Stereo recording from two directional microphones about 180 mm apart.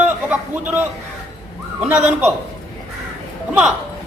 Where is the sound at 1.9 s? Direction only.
5° right (ahead or behind).